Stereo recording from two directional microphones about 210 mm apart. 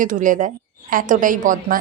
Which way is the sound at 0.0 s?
40° right (ahead or behind).